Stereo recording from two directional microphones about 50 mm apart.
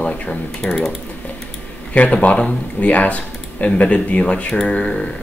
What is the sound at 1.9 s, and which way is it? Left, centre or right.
Speech, left.